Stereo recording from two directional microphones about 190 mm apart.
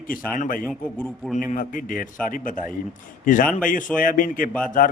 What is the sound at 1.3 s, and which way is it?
Speech, 40° left (ahead or behind).